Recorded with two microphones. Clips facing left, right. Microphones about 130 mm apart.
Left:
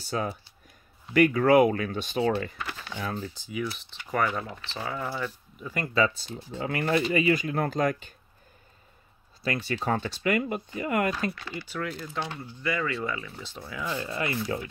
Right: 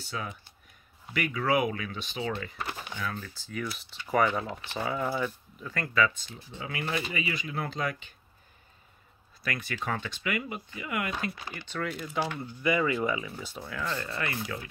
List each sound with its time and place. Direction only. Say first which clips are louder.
0.0 s speech: left 7 dB; 40° left (ahead or behind)
3.0 s speech: left 5 dB; 30° left (ahead or behind)
3.3 s speech: left 4 dB; 10° left (ahead or behind)
4.5 s speech: right 2 dB; 15° right (ahead or behind)
5.6 s speech: left 3 dB; 15° left (ahead or behind)
5.9 s speech: left 2 dB; 35° left (ahead or behind)
9.4 s speech: left 5 dB; 30° left (ahead or behind)
11.6 s speech: even; 5° left (ahead or behind)
11.9 s speech: right 2 dB; 10° right (ahead or behind)
13.6 s speech: left 2 dB; 5° left (ahead or behind); by 14.7 s 25° left (ahead or behind)